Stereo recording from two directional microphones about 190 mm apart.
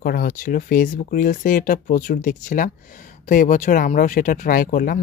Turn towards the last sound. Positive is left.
turn(degrees=45)  # may be behind; listen again after turning